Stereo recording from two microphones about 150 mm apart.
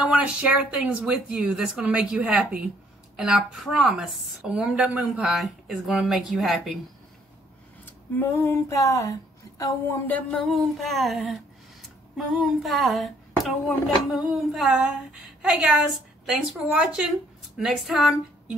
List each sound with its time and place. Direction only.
0.0 s a woman's voice: 5° right (ahead or behind)
7.8 s a woman's voice: 15° left (ahead or behind); by 18.1 s centre (ahead or behind)